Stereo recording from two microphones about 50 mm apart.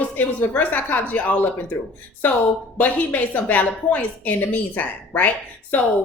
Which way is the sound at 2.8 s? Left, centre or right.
Left.